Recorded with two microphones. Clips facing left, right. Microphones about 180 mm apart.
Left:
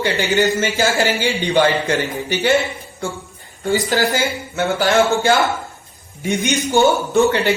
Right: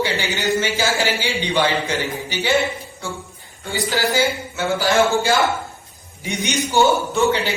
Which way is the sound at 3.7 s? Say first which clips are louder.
Left 4 dB; 50° left (ahead or behind).